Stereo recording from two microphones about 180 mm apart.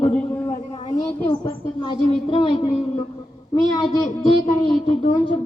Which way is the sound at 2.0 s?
30° left (ahead or behind).